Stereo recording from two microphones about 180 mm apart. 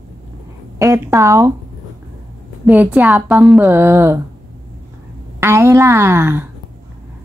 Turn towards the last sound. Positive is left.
turn(degrees=-15)  # may be behind; listen again after turning